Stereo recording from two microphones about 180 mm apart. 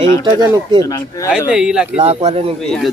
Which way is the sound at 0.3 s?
20° right (ahead or behind).